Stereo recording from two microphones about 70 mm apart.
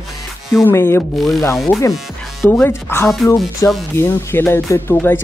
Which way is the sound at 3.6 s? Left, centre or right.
Left.